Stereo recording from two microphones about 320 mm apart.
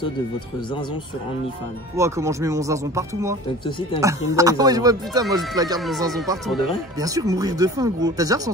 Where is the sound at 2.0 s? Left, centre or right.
Centre.